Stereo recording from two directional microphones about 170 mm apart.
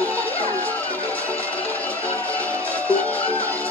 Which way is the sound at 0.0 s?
10° left (ahead or behind).